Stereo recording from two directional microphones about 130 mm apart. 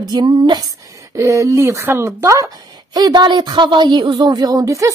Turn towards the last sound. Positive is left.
turn(degrees=-25)  # may be behind; listen again after turning